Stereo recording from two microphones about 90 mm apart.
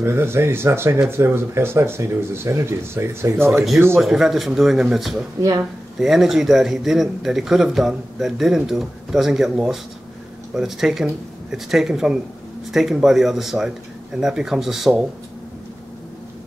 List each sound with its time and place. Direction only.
0.0 s speech: 25° right (ahead or behind)
4.0 s speech: 5° right (ahead or behind)